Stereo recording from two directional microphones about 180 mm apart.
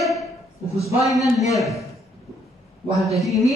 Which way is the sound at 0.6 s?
15° left (ahead or behind).